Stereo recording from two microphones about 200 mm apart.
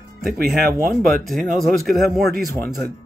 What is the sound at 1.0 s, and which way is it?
Speech, centre (ahead or behind).